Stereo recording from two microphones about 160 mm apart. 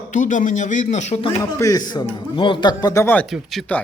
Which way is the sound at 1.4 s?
20° left (ahead or behind).